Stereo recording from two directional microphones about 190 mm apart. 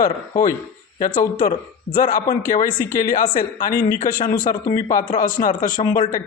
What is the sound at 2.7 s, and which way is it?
Speech, 10° left (ahead or behind).